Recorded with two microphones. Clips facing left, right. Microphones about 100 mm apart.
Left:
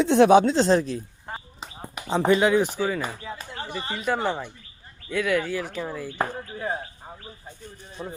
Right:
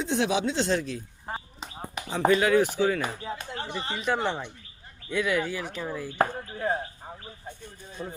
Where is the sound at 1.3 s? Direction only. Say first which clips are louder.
Right 2 dB; 5° right (ahead or behind).